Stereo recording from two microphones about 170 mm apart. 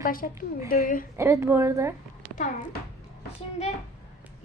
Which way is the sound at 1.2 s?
15° right (ahead or behind).